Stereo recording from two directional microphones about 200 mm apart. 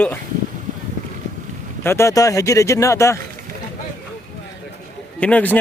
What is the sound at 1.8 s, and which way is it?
Speech, 10° left (ahead or behind).